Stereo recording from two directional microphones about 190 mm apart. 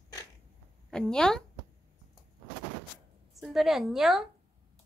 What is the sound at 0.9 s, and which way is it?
Speech, 5° left (ahead or behind).